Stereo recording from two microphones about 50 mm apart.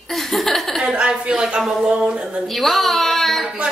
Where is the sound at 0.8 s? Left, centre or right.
Centre.